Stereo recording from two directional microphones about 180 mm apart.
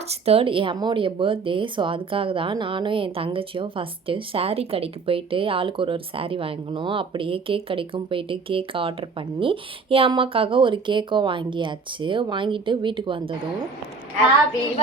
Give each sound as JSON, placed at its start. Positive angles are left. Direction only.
{"t": 0.1, "sound": "speech", "side_deg": -35}